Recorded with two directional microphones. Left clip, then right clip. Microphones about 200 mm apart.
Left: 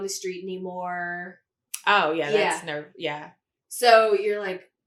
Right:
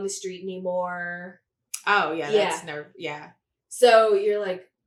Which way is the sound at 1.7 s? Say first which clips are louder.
Left 1 dB; 30° right (ahead or behind).